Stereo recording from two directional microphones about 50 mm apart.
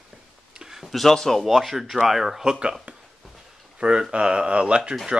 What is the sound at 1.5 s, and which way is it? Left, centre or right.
Speech, centre.